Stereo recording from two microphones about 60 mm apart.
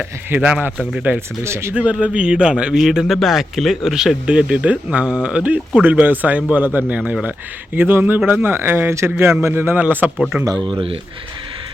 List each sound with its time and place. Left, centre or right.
0.3 s speech: right
0.8 s speech: right
1.5 s speech: right
1.7 s speech: right
4.4 s speech: centre
7.8 s speech: right
10.2 s speech: centre